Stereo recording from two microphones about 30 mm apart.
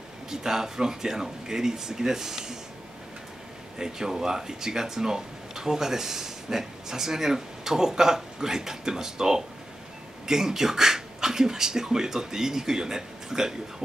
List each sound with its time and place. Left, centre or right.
0.3 s speech: centre
3.7 s speech: centre